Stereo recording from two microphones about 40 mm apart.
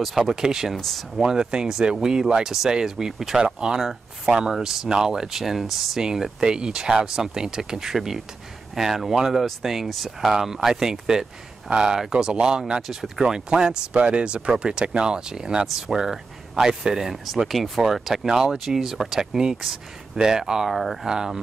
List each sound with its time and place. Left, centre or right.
0.0 s speech: centre
0.7 s speech: centre
1.2 s speech: centre
6.4 s speech: centre
20.7 s speech: centre
21.1 s speech: centre